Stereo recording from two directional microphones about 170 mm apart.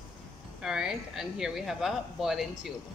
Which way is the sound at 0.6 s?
5° right (ahead or behind).